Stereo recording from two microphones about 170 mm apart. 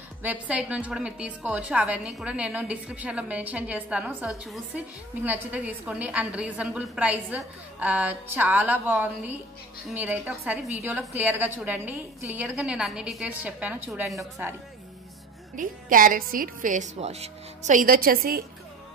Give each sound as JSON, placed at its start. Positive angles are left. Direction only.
{"t": 0.2, "sound": "a woman's voice", "side_deg": -10}
{"t": 15.5, "sound": "a woman's voice", "side_deg": -50}